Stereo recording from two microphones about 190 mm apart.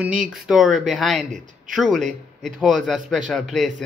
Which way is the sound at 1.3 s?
40° right (ahead or behind).